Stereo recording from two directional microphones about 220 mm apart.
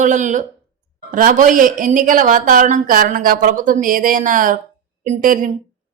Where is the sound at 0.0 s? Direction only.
35° right (ahead or behind).